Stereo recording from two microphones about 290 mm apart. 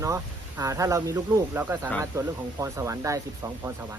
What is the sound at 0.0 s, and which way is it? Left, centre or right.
Speech, centre.